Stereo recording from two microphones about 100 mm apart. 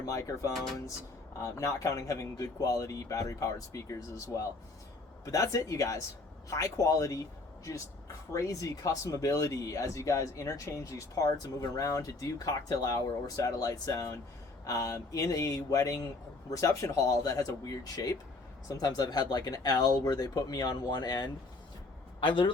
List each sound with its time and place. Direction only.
0.0 s speech: 35° left (ahead or behind)
0.5 s speech: 5° left (ahead or behind)
1.4 s speech: 30° left (ahead or behind); by 22.5 s 55° left (ahead or behind)